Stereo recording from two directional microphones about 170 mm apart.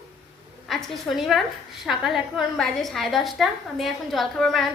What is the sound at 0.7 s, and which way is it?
A woman's voice, centre (ahead or behind).